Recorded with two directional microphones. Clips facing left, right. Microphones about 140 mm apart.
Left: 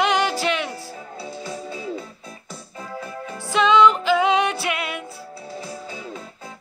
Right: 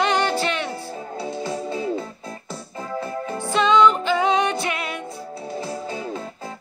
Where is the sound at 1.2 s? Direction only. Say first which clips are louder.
Right 5 dB; 35° right (ahead or behind).